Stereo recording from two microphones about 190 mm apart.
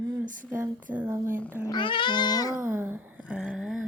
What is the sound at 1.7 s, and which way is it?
Cat, 25° left (ahead or behind).